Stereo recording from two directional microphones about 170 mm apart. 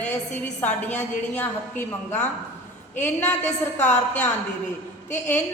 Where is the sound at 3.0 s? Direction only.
10° left (ahead or behind).